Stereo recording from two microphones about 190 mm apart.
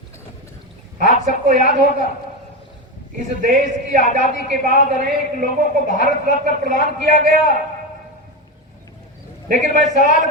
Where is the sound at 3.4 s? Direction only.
40° right (ahead or behind).